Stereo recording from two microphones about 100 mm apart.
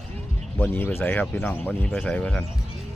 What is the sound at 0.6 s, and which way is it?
Speech, 15° left (ahead or behind).